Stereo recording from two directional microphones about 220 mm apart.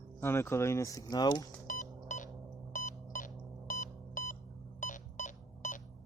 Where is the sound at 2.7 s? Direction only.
35° left (ahead or behind).